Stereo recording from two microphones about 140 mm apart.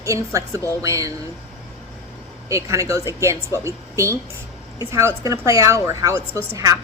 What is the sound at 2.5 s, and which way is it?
A woman's voice, 20° right (ahead or behind).